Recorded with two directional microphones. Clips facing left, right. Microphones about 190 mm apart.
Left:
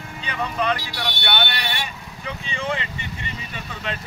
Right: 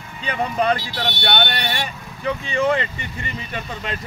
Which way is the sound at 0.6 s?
40° right (ahead or behind).